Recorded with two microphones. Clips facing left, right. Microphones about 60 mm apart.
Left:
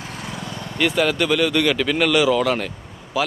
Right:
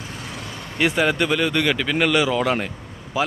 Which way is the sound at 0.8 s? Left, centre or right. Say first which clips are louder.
Even; right.